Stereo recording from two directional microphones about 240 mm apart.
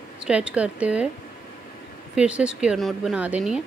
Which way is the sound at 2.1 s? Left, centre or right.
Centre.